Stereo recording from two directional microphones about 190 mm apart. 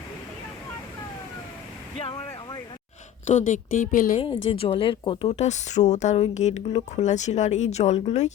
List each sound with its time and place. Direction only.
2.0 s vehicle: 30° left (ahead or behind)
3.2 s a woman's voice: 40° left (ahead or behind)
4.4 s speech: 30° left (ahead or behind)